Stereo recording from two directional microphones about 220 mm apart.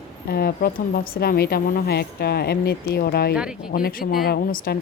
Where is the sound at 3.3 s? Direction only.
5° right (ahead or behind).